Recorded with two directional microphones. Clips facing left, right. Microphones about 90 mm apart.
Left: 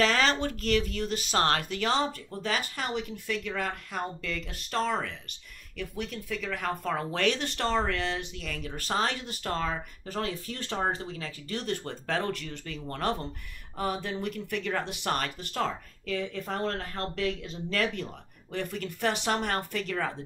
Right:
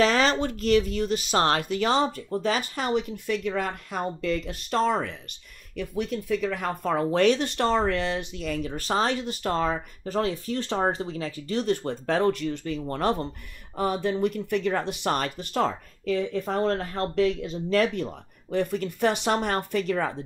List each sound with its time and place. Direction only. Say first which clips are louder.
0.0 s speech: right 4 dB; 20° right (ahead or behind)